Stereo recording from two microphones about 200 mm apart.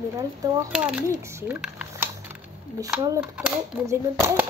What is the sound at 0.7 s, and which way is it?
Typing, 5° right (ahead or behind).